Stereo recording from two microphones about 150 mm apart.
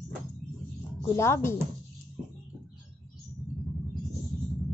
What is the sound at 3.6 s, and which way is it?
Music, centre (ahead or behind).